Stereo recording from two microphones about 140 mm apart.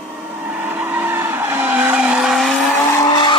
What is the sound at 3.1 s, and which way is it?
Vehicle, 35° left (ahead or behind).